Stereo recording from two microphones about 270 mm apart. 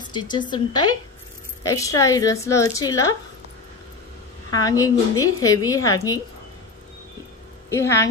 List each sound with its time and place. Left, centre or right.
0.0 s a woman's voice: centre
4.6 s a woman's voice: centre
7.7 s a woman's voice: centre